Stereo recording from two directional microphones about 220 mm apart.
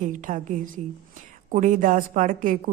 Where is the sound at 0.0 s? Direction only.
35° right (ahead or behind).